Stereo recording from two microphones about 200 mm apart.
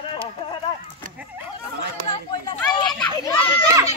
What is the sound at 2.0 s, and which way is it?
Chatter, 25° left (ahead or behind).